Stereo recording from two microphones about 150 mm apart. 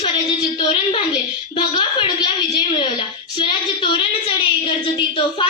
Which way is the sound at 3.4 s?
30° left (ahead or behind).